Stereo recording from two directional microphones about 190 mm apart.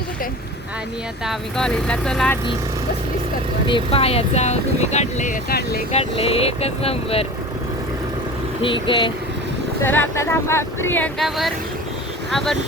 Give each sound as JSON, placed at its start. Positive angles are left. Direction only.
{"t": 1.2, "sound": "speech", "side_deg": 0}
{"t": 3.7, "sound": "speech", "side_deg": 30}
{"t": 5.9, "sound": "speech", "side_deg": 30}
{"t": 8.6, "sound": "speech", "side_deg": 25}
{"t": 9.8, "sound": "speech", "side_deg": 10}